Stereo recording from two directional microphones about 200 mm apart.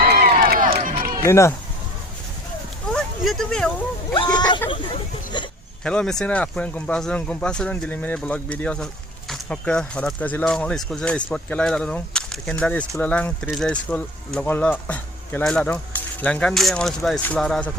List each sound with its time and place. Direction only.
0.0 s run: 45° right (ahead or behind)
1.2 s speech: 15° left (ahead or behind)
2.9 s a sound: centre (ahead or behind)
4.1 s speech: 25° left (ahead or behind)
5.8 s speech: 5° left (ahead or behind)